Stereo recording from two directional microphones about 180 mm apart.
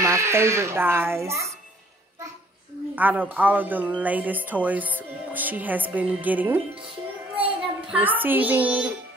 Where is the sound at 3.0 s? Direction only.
10° right (ahead or behind).